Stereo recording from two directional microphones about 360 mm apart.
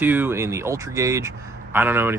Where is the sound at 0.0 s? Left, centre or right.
Centre.